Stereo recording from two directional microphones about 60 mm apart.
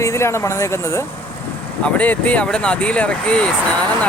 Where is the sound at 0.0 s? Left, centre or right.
Left.